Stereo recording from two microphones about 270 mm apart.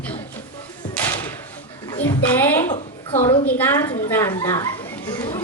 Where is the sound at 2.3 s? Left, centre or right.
Centre.